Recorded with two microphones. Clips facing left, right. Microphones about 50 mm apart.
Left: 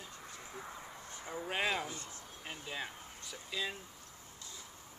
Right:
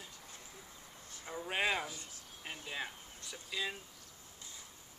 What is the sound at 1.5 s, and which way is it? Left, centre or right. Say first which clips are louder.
Speech: right 1 dB; centre.